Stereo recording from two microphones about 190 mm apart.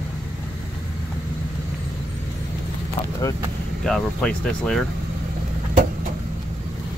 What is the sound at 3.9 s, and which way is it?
Speech, 5° left (ahead or behind).